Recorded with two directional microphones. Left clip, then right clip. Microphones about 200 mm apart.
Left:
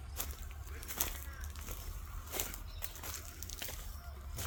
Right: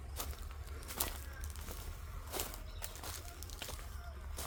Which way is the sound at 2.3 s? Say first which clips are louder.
Left 1 dB; centre (ahead or behind).